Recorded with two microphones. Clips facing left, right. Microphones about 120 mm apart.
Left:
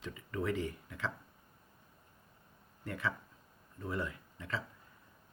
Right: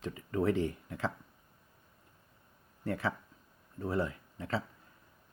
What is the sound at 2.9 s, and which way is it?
Speech, 35° right (ahead or behind).